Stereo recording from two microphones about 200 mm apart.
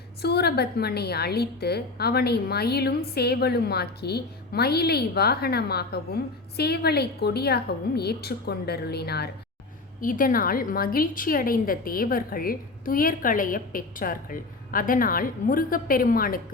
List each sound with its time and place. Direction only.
0.2 s a woman's voice: 55° left (ahead or behind)
10.0 s a woman's voice: 45° left (ahead or behind)